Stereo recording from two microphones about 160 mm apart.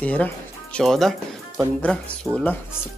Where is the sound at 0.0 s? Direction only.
10° left (ahead or behind).